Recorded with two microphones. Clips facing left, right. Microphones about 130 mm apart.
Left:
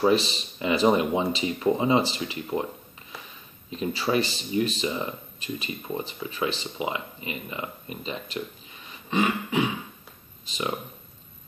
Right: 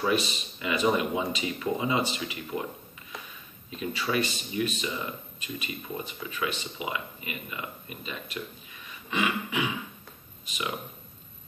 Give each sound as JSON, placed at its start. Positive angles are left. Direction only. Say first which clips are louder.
{"t": 0.0, "sound": "speech", "louder": "left 5 dB", "side_deg": 30}
{"t": 3.7, "sound": "speech", "louder": "left 4 dB", "side_deg": 30}